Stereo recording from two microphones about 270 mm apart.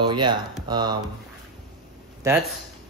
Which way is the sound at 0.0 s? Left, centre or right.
Centre.